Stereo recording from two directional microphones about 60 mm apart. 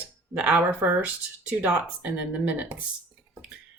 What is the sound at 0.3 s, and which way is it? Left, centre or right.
A woman's voice, centre.